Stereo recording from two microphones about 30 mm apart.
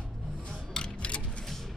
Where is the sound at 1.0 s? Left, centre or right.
Left.